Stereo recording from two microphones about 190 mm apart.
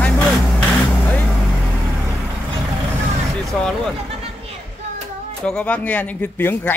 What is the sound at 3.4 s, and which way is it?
Vehicle, centre (ahead or behind).